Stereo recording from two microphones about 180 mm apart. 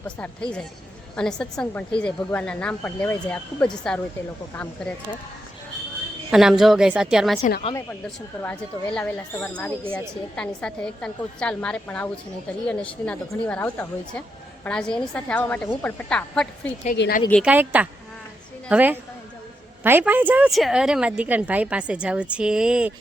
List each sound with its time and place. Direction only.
0.2 s a woman's voice: 5° left (ahead or behind)
6.3 s a woman's voice: centre (ahead or behind)
8.4 s a woman's voice: 10° left (ahead or behind)
17.0 s speech: 75° left (ahead or behind)
17.4 s a woman's voice: 10° right (ahead or behind)